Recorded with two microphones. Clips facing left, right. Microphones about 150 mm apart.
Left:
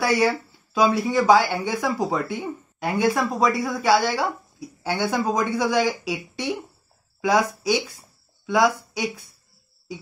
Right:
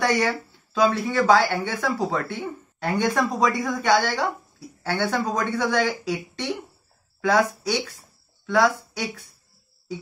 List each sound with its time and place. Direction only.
0.0 s speech: 5° left (ahead or behind)